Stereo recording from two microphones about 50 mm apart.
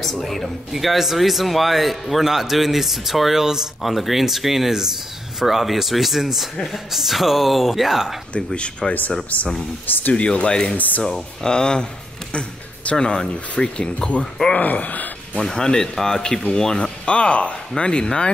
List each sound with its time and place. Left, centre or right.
0.0 s speech: centre
8.3 s speech: centre
9.3 s speech: left
10.1 s speech: left
10.8 s speech: left
11.4 s speech: centre
14.5 s speech: left
15.3 s speech: centre